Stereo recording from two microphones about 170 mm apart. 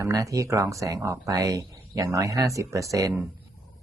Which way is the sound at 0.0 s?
20° right (ahead or behind).